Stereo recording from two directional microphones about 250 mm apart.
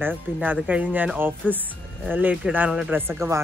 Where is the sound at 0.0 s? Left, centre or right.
Centre.